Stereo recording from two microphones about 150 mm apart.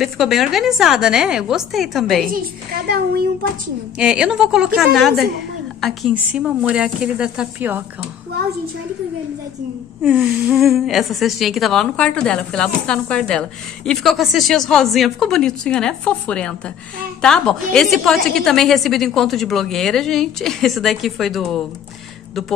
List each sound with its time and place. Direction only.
0.0 s a woman's voice: centre (ahead or behind)
2.2 s a woman's voice: 75° right (ahead or behind)
4.0 s a woman's voice: 5° right (ahead or behind)
6.1 s speech: 10° right (ahead or behind)
10.0 s a woman's voice: 10° right (ahead or behind)